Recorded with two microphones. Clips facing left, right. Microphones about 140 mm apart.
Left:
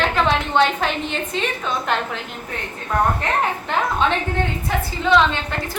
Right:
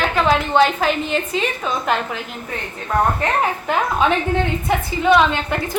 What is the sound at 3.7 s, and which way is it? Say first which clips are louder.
Speech: right 3 dB; 5° right (ahead or behind).